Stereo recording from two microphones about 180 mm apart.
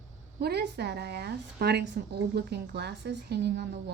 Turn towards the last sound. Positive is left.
turn(degrees=-60)  # may be behind; listen again after turning